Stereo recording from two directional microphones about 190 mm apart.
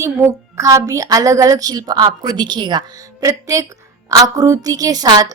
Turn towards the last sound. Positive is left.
turn(degrees=-20)  # may be behind; listen again after turning